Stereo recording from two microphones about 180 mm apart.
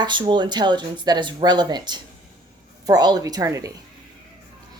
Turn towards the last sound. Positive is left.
turn(degrees=-20)  # may be behind; listen again after turning